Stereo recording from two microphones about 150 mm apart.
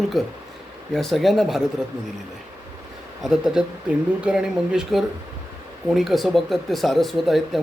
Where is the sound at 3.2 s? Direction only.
5° right (ahead or behind).